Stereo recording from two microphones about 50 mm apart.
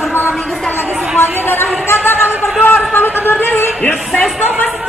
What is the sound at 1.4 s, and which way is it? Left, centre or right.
Speech, left.